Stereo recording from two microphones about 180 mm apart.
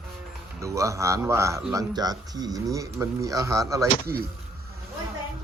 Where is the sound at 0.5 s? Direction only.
15° right (ahead or behind).